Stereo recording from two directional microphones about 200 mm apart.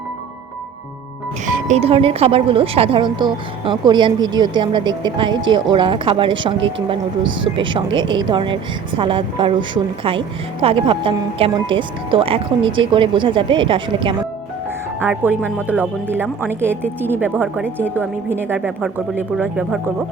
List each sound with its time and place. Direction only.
1.6 s a woman's voice: 30° right (ahead or behind)
15.0 s a woman's voice: 10° right (ahead or behind)